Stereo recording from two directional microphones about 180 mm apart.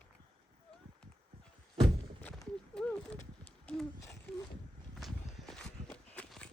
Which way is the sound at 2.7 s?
5° left (ahead or behind).